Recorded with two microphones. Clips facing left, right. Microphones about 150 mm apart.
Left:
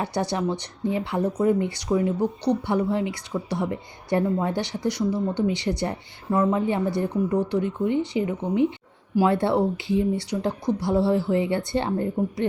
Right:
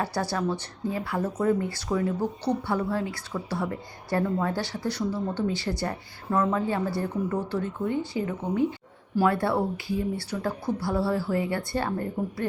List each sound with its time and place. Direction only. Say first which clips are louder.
0.0 s speech: left 2 dB; 20° left (ahead or behind)